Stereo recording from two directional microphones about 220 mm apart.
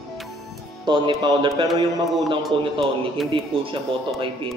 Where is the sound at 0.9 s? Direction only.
20° right (ahead or behind).